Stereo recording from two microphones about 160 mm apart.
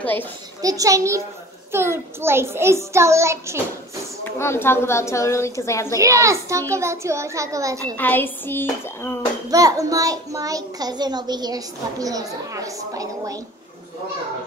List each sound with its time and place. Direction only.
0.0 s a woman's voice: 10° left (ahead or behind)
0.6 s a child's voice: 20° right (ahead or behind)
4.2 s a woman's voice: 15° left (ahead or behind)
5.9 s a child's voice: 20° right (ahead or behind)
7.8 s a woman's voice: 10° left (ahead or behind)
9.5 s a child's voice: 20° right (ahead or behind)